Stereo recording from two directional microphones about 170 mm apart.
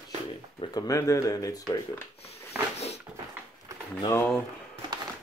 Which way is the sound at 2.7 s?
40° left (ahead or behind).